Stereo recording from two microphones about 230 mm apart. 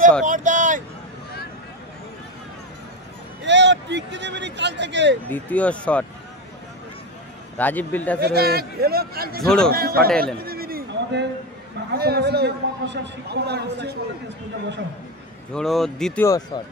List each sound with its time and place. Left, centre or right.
0.2 s vehicle: right
3.4 s a sound: right
5.3 s speech: centre
7.5 s speech: centre
8.2 s a man's voice: right
9.4 s speech: centre
9.7 s a man's voice: right
10.2 s a sound: right
11.9 s a man's voice: right
15.5 s speech: centre